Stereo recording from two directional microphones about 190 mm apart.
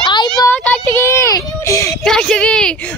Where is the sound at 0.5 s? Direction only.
10° left (ahead or behind).